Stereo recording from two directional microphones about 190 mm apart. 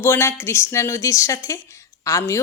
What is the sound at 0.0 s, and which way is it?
A woman's voice, 10° left (ahead or behind).